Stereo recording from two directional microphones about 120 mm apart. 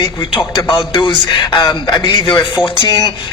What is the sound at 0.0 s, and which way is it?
A man's voice, 40° left (ahead or behind).